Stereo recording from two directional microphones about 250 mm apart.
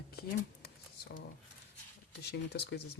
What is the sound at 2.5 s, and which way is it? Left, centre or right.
Speech, left.